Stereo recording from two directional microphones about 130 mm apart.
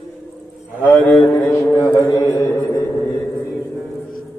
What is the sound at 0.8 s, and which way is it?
Speech, centre (ahead or behind).